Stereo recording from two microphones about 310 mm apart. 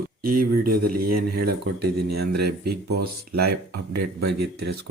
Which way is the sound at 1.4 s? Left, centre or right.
Right.